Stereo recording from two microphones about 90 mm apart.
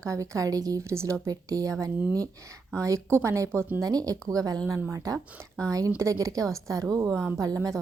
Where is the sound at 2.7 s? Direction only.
35° right (ahead or behind).